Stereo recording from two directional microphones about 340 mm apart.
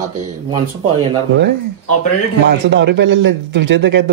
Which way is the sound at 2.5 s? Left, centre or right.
Right.